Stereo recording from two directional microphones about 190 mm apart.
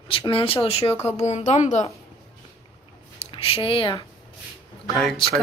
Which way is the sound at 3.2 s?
30° left (ahead or behind).